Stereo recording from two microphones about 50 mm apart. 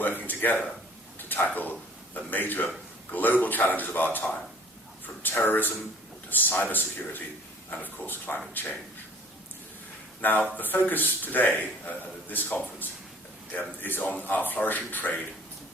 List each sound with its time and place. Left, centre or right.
0.2 s a man's voice: left
1.3 s a sound: left
2.1 s a man's voice: left
10.2 s a man's voice: left